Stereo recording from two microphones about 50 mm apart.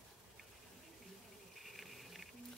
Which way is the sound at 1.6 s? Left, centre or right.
Centre.